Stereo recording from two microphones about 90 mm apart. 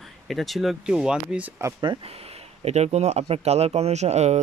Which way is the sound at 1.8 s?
75° right (ahead or behind).